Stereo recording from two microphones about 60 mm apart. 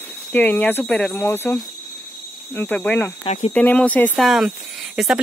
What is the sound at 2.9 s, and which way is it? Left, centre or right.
Speech, left.